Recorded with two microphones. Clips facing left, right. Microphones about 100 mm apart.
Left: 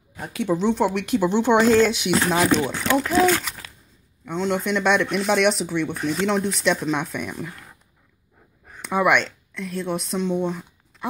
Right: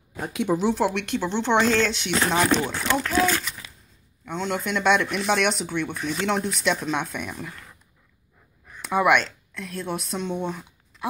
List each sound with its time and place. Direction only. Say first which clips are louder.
0.2 s speech: left 1 dB; 15° right (ahead or behind); by 3.1 s 5° left (ahead or behind)
3.1 s a child's voice: left 5 dB; 20° left (ahead or behind)
4.3 s speech: left 4 dB; centre (ahead or behind)
8.8 s speech: even; centre (ahead or behind)